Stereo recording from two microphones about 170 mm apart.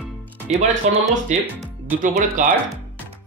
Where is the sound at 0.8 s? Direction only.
40° right (ahead or behind).